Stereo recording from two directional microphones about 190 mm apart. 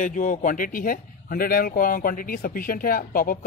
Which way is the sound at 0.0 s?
40° left (ahead or behind).